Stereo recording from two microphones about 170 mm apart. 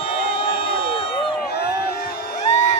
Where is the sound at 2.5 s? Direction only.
45° left (ahead or behind).